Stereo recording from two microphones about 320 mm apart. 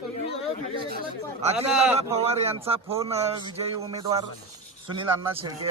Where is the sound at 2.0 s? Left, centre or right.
Centre.